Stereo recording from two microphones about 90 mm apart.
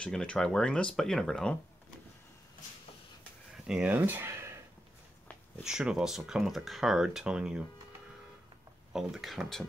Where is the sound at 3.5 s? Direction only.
5° right (ahead or behind).